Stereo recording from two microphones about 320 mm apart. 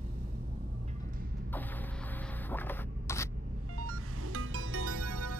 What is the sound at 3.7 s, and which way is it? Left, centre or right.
Music, right.